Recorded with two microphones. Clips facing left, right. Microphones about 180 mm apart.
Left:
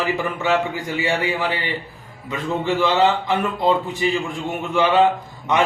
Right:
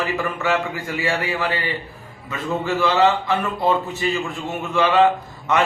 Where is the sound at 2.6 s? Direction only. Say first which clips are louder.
Even; 15° left (ahead or behind).